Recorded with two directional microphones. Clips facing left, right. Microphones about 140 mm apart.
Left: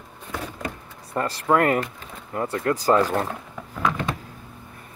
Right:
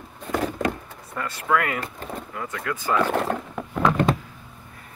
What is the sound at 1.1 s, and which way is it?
Speech, 35° left (ahead or behind).